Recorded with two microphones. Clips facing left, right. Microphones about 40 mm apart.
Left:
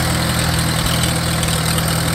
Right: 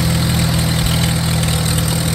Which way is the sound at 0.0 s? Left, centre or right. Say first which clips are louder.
Right 1 dB; left.